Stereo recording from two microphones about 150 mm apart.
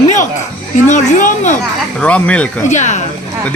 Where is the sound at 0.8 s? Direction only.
55° left (ahead or behind).